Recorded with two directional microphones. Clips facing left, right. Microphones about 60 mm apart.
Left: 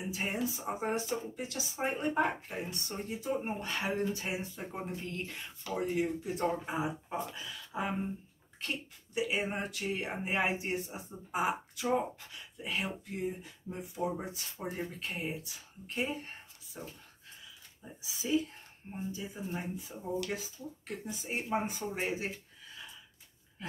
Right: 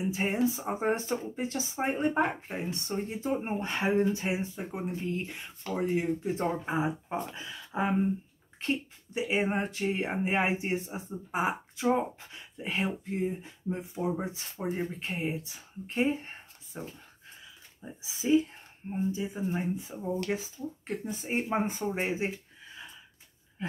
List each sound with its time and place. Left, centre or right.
0.1 s speech: right
18.0 s speech: right
23.6 s a sound: right